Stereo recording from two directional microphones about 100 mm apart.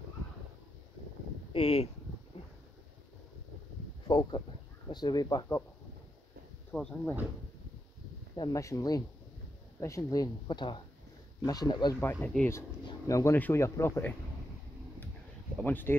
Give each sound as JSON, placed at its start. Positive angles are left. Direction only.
{"t": 1.5, "sound": "speech", "side_deg": 75}
{"t": 4.1, "sound": "speech", "side_deg": 45}
{"t": 6.7, "sound": "speech", "side_deg": 10}
{"t": 8.4, "sound": "speech", "side_deg": 35}
{"t": 12.0, "sound": "speech", "side_deg": 20}
{"t": 15.6, "sound": "speech", "side_deg": 20}